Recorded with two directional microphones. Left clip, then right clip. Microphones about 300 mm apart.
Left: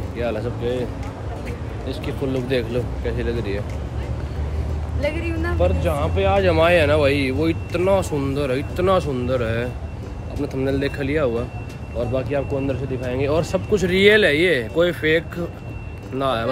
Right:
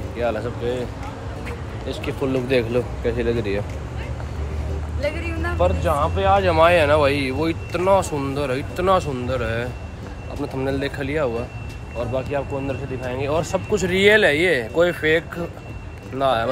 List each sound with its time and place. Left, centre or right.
0.2 s speech: centre
1.9 s speech: centre
5.0 s speech: centre